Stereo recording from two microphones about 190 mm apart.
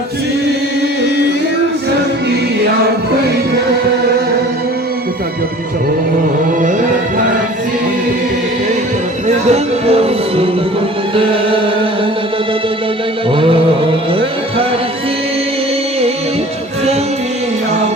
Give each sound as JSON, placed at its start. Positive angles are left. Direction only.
{"t": 9.2, "sound": "speech", "side_deg": -35}
{"t": 11.1, "sound": "music", "side_deg": -30}
{"t": 13.3, "sound": "music", "side_deg": -30}